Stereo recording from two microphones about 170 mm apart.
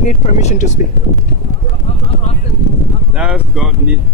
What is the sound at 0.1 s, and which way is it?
Speech, 40° left (ahead or behind).